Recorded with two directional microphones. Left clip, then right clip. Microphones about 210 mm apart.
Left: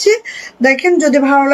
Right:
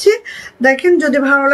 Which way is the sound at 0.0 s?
20° right (ahead or behind).